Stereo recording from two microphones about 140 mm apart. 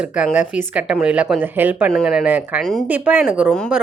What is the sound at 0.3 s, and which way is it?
Speech, 10° right (ahead or behind).